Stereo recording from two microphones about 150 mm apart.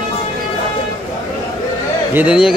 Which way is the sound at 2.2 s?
5° right (ahead or behind).